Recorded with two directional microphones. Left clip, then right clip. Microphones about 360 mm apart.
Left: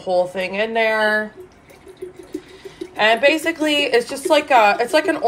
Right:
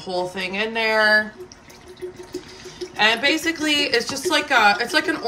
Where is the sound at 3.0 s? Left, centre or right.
Centre.